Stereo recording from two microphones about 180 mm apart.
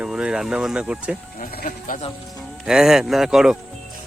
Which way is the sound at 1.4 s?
50° left (ahead or behind).